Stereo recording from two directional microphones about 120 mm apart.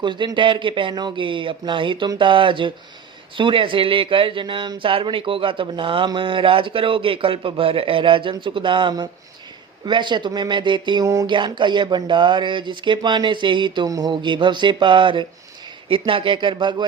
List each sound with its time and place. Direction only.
0.0 s speech: 40° right (ahead or behind)
11.0 s a sound: 30° right (ahead or behind)
11.3 s speech: 40° right (ahead or behind)